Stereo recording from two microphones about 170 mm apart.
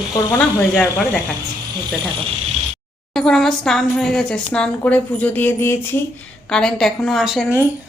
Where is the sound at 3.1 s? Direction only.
Centre (ahead or behind).